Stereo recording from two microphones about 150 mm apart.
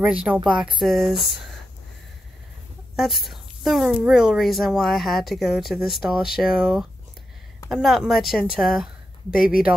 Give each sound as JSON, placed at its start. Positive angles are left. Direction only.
{"t": 0.0, "sound": "a woman's voice", "side_deg": -10}
{"t": 3.0, "sound": "a woman's voice", "side_deg": 0}
{"t": 9.3, "sound": "speech", "side_deg": 70}